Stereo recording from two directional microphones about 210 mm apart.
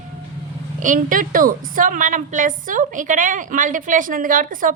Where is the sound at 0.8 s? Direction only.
40° right (ahead or behind).